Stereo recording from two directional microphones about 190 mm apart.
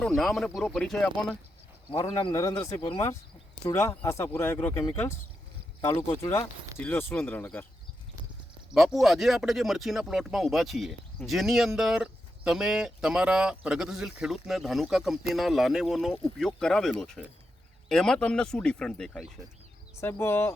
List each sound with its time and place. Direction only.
0.0 s speech: centre (ahead or behind)
2.0 s speech: 20° left (ahead or behind)
6.7 s speech: 10° left (ahead or behind)
8.7 s speech: centre (ahead or behind)
20.0 s speech: 15° left (ahead or behind)